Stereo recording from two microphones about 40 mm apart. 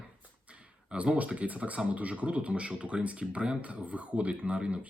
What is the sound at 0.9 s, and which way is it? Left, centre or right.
Speech, right.